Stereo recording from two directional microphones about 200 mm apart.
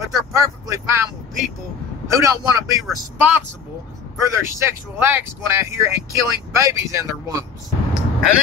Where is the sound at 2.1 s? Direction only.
15° right (ahead or behind).